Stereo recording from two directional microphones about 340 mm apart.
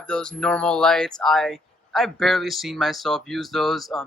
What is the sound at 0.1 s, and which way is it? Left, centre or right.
Speech, centre.